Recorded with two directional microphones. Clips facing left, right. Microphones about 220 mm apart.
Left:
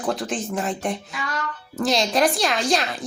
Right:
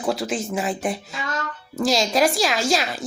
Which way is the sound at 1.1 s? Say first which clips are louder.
Right 1 dB; 25° right (ahead or behind).